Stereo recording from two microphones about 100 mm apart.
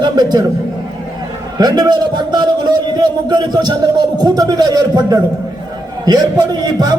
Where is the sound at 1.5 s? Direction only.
45° right (ahead or behind).